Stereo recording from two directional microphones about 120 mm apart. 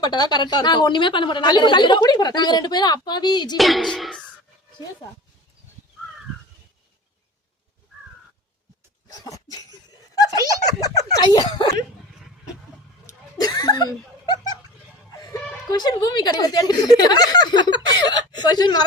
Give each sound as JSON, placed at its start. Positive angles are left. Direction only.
{"t": 0.0, "sound": "a woman's voice", "side_deg": 35}
{"t": 3.6, "sound": "speech", "side_deg": 0}
{"t": 9.0, "sound": "a sound", "side_deg": 30}
{"t": 10.2, "sound": "giggle", "side_deg": 30}
{"t": 13.1, "sound": "a sound", "side_deg": 30}
{"t": 15.7, "sound": "a woman's voice", "side_deg": 35}